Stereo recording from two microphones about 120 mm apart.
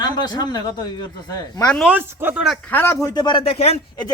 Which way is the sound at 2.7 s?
20° left (ahead or behind).